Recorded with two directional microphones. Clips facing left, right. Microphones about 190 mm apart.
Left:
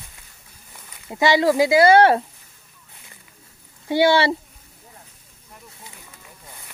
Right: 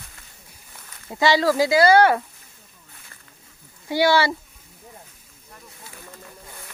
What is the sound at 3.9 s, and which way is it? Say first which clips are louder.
Speech: left 2 dB; 25° left (ahead or behind).